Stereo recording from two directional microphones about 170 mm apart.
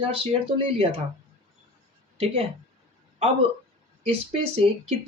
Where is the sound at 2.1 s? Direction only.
35° right (ahead or behind).